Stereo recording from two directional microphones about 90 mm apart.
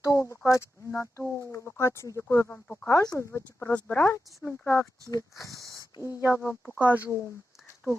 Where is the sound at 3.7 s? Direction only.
20° left (ahead or behind).